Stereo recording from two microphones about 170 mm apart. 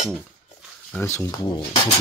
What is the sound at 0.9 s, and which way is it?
Speech, 15° left (ahead or behind).